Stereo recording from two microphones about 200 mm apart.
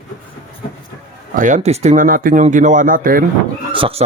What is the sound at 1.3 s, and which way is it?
Speech, 40° right (ahead or behind).